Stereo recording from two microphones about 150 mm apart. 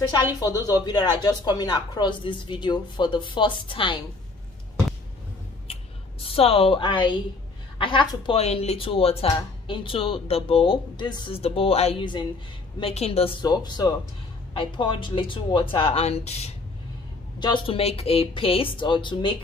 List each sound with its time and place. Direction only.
0.4 s speech: 25° left (ahead or behind)
6.2 s speech: 40° left (ahead or behind)
8.4 s speech: 45° left (ahead or behind)
12.8 s speech: 40° left (ahead or behind)
13.4 s speech: 30° left (ahead or behind); by 16.5 s 45° left (ahead or behind)
17.4 s speech: 35° left (ahead or behind)